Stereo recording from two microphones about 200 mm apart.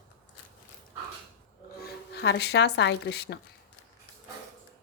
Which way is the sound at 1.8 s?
55° left (ahead or behind).